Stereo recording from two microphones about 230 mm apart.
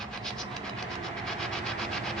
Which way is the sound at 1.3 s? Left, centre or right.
Centre.